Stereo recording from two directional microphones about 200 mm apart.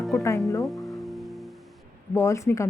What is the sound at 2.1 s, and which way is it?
Speech, 15° left (ahead or behind).